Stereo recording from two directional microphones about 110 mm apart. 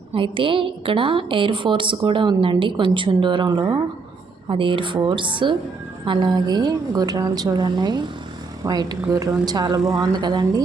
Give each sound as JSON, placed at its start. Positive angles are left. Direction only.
{"t": 0.1, "sound": "a woman's voice", "side_deg": -50}
{"t": 4.4, "sound": "a woman's voice", "side_deg": -50}